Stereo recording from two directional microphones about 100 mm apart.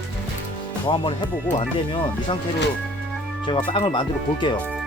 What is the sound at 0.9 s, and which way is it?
Speech, 55° left (ahead or behind).